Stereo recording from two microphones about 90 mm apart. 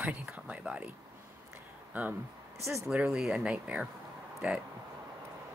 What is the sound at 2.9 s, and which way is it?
A woman's voice, 10° right (ahead or behind).